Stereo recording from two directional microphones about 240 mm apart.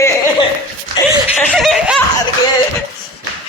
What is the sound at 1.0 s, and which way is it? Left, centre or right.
Music, centre.